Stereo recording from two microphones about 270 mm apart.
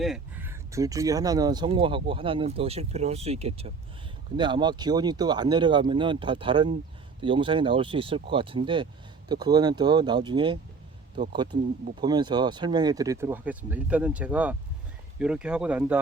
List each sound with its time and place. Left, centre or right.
0.0 s speech: centre